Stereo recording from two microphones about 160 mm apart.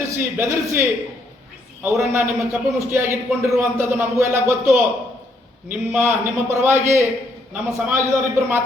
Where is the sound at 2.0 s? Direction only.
15° right (ahead or behind).